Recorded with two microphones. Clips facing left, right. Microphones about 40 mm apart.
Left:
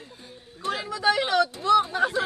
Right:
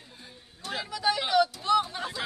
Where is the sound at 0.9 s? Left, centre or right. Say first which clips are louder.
Left 4 dB; left.